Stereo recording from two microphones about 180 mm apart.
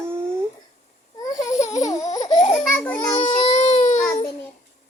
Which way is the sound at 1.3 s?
20° left (ahead or behind).